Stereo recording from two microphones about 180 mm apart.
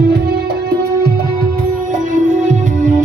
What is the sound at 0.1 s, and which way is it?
Music, 65° right (ahead or behind).